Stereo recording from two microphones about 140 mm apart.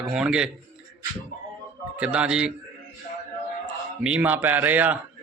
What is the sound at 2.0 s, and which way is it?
Speech, 10° right (ahead or behind).